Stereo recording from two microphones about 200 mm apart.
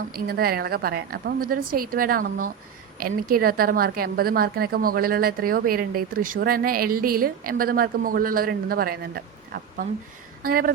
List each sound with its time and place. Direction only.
0.1 s a woman's voice: 50° right (ahead or behind)
10.4 s a woman's voice: 45° right (ahead or behind)